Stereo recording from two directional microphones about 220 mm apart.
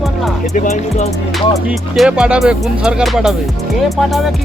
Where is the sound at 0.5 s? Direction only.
35° left (ahead or behind).